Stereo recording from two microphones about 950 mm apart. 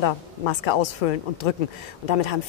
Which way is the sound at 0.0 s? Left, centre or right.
Left.